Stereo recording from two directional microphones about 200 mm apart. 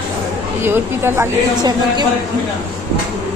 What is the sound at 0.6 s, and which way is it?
A woman's voice, 10° right (ahead or behind).